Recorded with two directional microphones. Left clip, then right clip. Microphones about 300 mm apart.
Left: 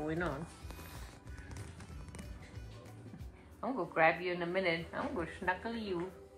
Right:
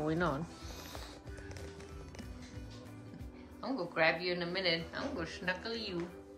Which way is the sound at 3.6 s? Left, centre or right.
Centre.